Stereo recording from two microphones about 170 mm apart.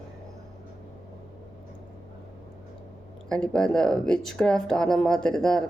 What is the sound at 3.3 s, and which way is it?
Speech, 5° left (ahead or behind).